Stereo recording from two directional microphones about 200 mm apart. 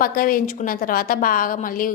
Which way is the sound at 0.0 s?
45° left (ahead or behind).